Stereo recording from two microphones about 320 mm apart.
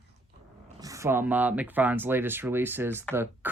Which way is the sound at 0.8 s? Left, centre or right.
Centre.